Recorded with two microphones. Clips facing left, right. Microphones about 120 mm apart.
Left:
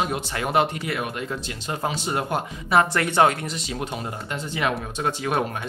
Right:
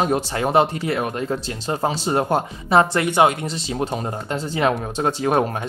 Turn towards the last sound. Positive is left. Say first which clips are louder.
# right 5 dB
turn(degrees=-35)  # may be behind; listen again after turning